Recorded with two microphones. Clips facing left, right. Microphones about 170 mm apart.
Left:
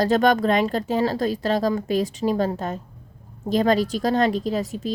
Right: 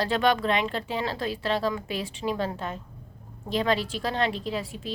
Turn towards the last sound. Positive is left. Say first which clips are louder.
# left 7 dB
turn(degrees=40)  # may be behind; listen again after turning